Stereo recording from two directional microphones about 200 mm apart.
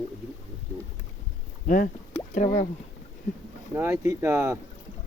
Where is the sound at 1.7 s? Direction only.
40° left (ahead or behind).